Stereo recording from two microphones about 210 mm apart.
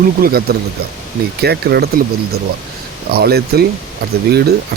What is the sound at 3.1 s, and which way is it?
Speech, 50° right (ahead or behind).